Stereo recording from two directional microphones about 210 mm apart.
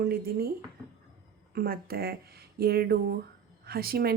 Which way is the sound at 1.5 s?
45° right (ahead or behind).